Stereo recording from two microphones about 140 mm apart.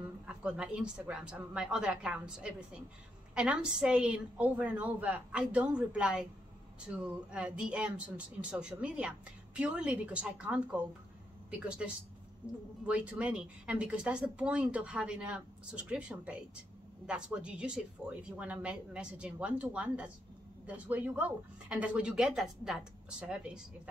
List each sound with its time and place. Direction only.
0.3 s speech: 5° right (ahead or behind)
12.8 s speech: 10° right (ahead or behind)